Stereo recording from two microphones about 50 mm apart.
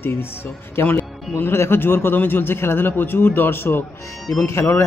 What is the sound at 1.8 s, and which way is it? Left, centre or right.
Speech, left.